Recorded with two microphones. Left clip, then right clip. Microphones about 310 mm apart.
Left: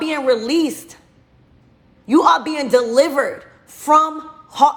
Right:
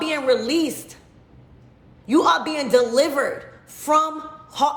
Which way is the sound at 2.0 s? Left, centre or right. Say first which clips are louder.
Left 4 dB; centre.